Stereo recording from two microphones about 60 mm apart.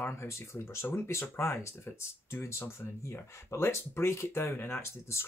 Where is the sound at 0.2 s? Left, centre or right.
Left.